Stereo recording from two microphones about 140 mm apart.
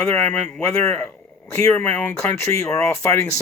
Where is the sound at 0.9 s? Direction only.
15° left (ahead or behind).